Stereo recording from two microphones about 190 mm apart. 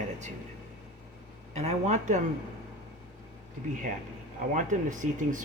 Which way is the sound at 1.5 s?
35° right (ahead or behind).